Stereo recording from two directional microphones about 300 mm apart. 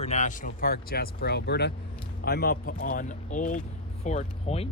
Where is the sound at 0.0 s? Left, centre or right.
Left.